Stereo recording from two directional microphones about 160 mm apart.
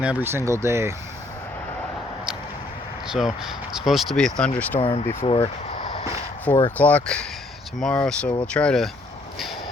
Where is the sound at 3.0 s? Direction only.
5° right (ahead or behind).